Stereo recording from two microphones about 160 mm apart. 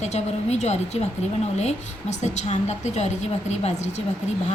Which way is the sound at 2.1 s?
45° left (ahead or behind).